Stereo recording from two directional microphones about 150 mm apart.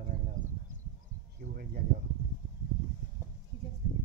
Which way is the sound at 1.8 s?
85° right.